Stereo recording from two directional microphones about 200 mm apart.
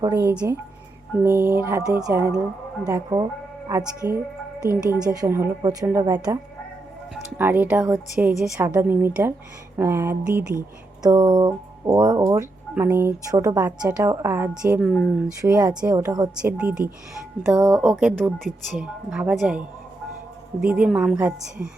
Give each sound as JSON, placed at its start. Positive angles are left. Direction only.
{"t": 0.0, "sound": "speech", "side_deg": -15}
{"t": 7.1, "sound": "speech", "side_deg": -5}
{"t": 8.5, "sound": "speech", "side_deg": -15}
{"t": 15.4, "sound": "speech", "side_deg": -15}
{"t": 16.4, "sound": "speech", "side_deg": -5}